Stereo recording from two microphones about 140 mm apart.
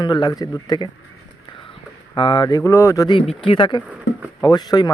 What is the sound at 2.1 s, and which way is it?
Speech, 35° left (ahead or behind).